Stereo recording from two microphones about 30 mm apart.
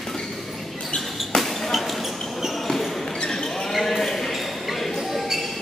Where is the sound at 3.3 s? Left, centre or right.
Centre.